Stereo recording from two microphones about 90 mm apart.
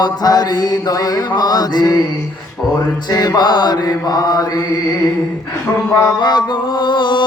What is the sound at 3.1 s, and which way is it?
Mantra, 50° left (ahead or behind).